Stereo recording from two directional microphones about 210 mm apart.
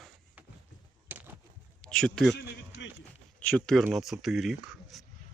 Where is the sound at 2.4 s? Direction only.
55° left (ahead or behind).